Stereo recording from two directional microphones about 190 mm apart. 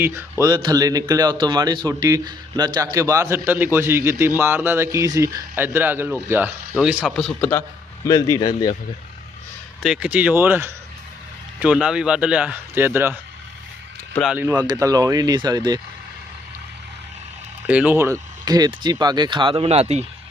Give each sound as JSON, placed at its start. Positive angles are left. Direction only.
{"t": 0.0, "sound": "speech", "side_deg": -15}
{"t": 8.0, "sound": "speech", "side_deg": 20}
{"t": 9.8, "sound": "speech", "side_deg": -5}
{"t": 14.2, "sound": "speech", "side_deg": -5}
{"t": 14.4, "sound": "speech", "side_deg": -20}
{"t": 17.7, "sound": "speech", "side_deg": -10}